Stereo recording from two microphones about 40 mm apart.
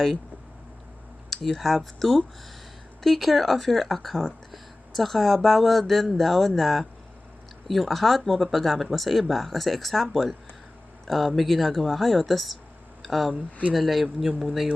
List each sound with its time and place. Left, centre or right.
1.3 s speech: centre
13.3 s speech: right
13.7 s speech: centre